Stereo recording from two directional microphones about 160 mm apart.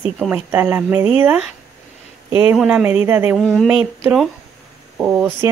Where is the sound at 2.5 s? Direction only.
5° right (ahead or behind).